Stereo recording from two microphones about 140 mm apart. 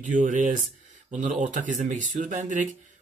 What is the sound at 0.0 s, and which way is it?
Speech, 65° right (ahead or behind).